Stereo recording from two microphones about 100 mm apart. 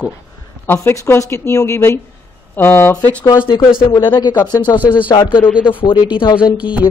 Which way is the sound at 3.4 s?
50° left (ahead or behind).